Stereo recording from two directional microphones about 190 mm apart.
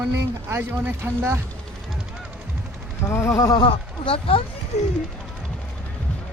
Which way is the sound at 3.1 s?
15° left (ahead or behind).